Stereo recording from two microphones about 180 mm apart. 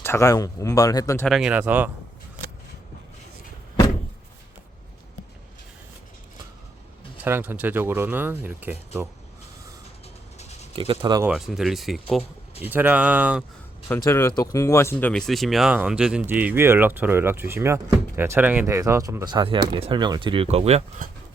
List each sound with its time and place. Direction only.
0.0 s speech: 15° left (ahead or behind)
1.3 s speech: 5° right (ahead or behind)
7.3 s speech: 10° right (ahead or behind)
10.3 s a sound: 35° left (ahead or behind)
10.8 s speech: 30° right (ahead or behind)
11.2 s speech: 5° right (ahead or behind)
13.8 s speech: 15° left (ahead or behind)
15.1 s speech: centre (ahead or behind); by 20.8 s 35° right (ahead or behind)